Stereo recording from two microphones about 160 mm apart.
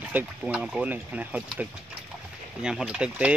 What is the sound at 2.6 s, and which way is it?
Speech, 5° right (ahead or behind).